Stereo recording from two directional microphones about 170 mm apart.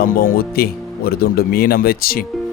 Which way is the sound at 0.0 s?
65° left (ahead or behind).